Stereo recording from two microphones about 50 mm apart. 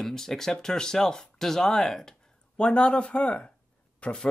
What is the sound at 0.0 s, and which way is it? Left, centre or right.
Speech, centre.